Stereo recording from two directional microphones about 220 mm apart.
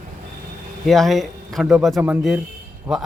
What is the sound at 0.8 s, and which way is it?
A man's voice, centre (ahead or behind).